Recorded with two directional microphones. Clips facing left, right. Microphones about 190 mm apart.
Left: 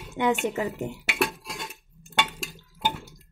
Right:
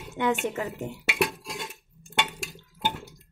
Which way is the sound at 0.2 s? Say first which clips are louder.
Left 2 dB; 15° left (ahead or behind).